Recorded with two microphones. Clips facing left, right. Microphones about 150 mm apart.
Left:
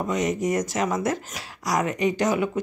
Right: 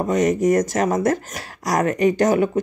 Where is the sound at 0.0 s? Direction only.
45° right (ahead or behind).